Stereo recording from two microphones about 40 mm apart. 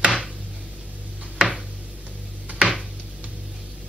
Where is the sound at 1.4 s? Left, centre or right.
Centre.